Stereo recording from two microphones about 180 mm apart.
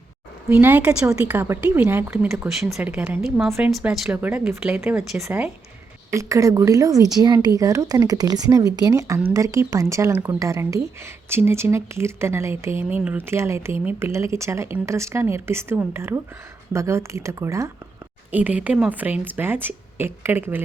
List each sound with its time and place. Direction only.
0.4 s speech: 10° right (ahead or behind)
2.3 s a woman's voice: centre (ahead or behind)